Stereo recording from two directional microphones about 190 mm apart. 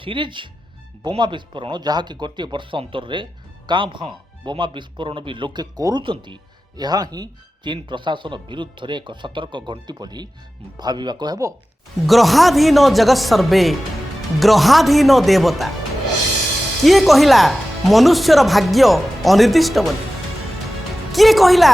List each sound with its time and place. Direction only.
0.0 s speech: 25° right (ahead or behind)
12.0 s speech: centre (ahead or behind)
16.8 s speech: centre (ahead or behind)
21.1 s speech: centre (ahead or behind)